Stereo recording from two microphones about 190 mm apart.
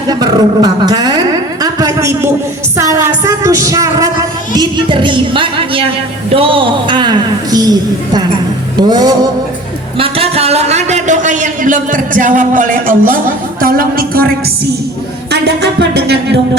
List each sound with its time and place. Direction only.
0.1 s a sound: 20° right (ahead or behind)
2.7 s music: 15° right (ahead or behind)
6.3 s a woman's voice: 30° right (ahead or behind)
10.0 s a man's voice: 30° right (ahead or behind); by 14.3 s 50° right (ahead or behind)
15.3 s music: 60° right (ahead or behind)